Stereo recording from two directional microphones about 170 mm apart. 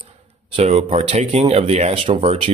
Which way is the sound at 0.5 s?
40° right (ahead or behind).